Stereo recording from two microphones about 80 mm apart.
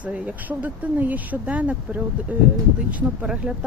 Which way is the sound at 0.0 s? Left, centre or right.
Centre.